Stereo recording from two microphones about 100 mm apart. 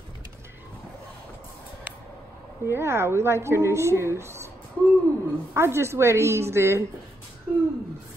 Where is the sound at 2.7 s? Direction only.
25° right (ahead or behind).